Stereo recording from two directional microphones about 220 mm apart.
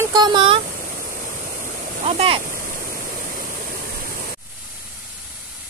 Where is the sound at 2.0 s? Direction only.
25° right (ahead or behind).